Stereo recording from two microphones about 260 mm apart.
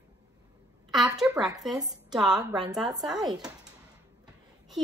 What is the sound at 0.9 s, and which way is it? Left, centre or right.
A woman's voice, centre.